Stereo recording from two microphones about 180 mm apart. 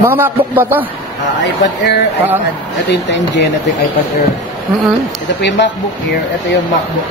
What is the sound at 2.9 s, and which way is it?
Speech, 70° left (ahead or behind).